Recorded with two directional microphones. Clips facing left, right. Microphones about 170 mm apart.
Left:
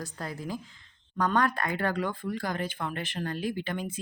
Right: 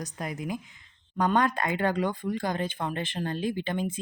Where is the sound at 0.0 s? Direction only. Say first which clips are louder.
Right 2 dB; 20° right (ahead or behind).